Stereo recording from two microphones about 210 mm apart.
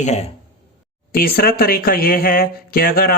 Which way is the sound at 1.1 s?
45° left (ahead or behind).